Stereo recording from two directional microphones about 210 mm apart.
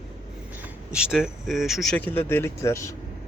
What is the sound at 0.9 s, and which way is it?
A man's voice, 5° right (ahead or behind).